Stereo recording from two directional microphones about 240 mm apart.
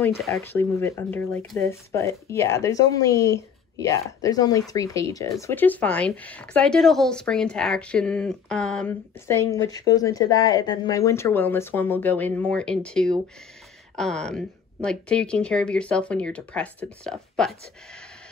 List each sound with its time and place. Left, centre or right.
0.0 s speech: centre